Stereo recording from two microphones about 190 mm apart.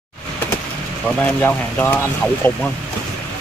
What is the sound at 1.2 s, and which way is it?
Speech, 10° left (ahead or behind).